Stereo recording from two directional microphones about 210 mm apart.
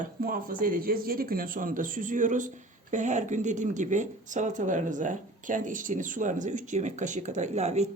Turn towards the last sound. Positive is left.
turn(degrees=-30)  # may be behind; listen again after turning